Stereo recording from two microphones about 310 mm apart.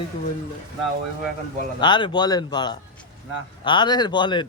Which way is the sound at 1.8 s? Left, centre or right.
Centre.